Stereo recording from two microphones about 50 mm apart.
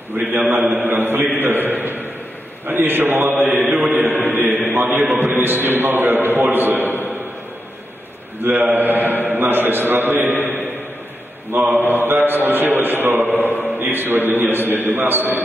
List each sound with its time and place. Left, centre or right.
0.1 s a man's voice: right
1.4 s a sound: right
2.6 s a man's voice: right
3.4 s mantra: centre
4.1 s a man's voice: right
6.9 s a sound: left
8.4 s a man's voice: right
11.5 s a man's voice: right